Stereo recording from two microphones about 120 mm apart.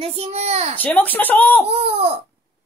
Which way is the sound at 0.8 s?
15° left (ahead or behind).